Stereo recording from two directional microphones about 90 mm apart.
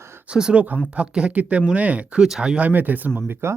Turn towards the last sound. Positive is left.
turn(degrees=-25)  # may be behind; listen again after turning